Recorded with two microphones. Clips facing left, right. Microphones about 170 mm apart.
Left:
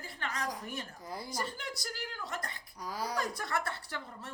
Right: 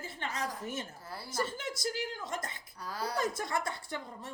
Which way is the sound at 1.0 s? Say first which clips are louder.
Left 3 dB; 15° left (ahead or behind).